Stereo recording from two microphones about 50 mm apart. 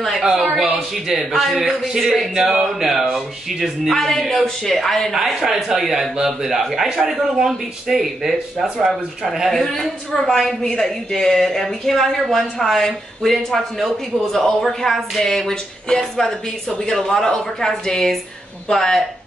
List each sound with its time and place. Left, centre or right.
0.2 s a man's voice: centre
3.9 s speech: centre
5.1 s a man's voice: centre